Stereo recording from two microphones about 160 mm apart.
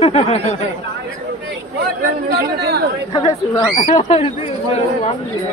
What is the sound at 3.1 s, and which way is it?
Speech, 35° left (ahead or behind).